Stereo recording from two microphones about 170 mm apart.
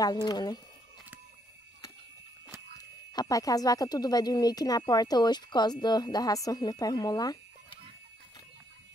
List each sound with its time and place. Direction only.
0.0 s speech: 25° left (ahead or behind)
3.1 s speech: 20° left (ahead or behind)